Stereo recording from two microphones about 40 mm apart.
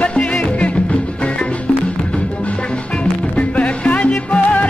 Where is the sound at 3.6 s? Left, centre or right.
Left.